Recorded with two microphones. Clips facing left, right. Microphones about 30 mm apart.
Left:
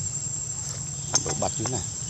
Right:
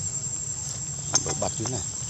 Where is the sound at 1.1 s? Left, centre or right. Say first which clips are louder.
Left 1 dB; centre.